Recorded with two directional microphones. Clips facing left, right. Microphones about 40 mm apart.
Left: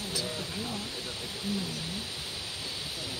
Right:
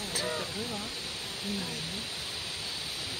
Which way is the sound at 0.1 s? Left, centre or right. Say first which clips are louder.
Right 3 dB; right.